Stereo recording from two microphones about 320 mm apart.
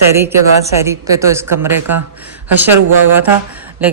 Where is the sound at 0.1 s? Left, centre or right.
Centre.